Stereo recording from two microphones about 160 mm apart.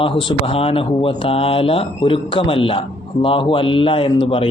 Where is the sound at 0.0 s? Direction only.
35° left (ahead or behind).